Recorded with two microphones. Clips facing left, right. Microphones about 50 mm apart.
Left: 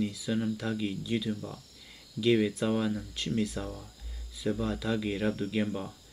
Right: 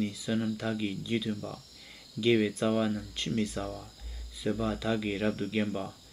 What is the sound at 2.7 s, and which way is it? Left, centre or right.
Speech, centre.